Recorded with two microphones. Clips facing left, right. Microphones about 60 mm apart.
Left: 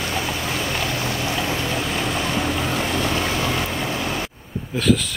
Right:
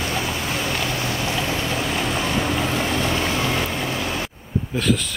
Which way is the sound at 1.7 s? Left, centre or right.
Right.